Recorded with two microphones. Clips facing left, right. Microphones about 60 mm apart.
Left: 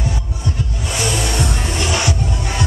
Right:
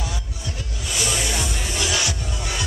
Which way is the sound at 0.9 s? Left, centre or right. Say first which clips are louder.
Left 5 dB; left.